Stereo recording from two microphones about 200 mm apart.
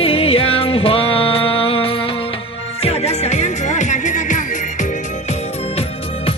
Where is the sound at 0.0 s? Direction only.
30° left (ahead or behind).